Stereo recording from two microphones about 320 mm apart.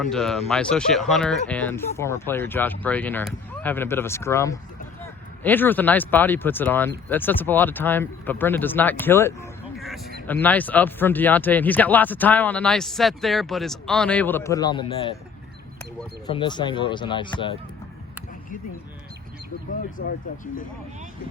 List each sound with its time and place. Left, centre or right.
0.0 s speech: centre
16.2 s speech: centre
20.0 s speech: left